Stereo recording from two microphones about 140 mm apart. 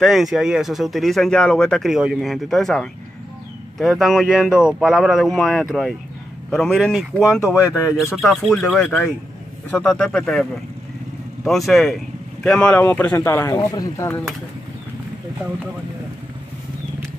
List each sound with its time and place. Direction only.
0.0 s speech: centre (ahead or behind)
11.4 s speech: centre (ahead or behind); by 14.2 s 20° left (ahead or behind)